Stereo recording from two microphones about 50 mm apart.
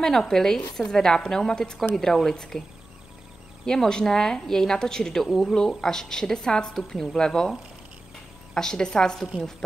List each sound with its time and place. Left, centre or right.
0.0 s a woman's voice: centre
3.6 s a woman's voice: centre
8.5 s a woman's voice: centre